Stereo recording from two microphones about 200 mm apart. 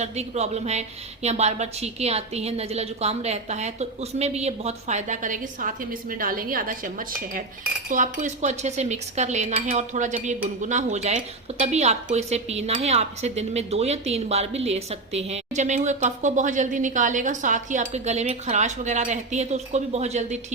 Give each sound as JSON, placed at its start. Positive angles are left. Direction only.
{"t": 0.0, "sound": "speech", "side_deg": -35}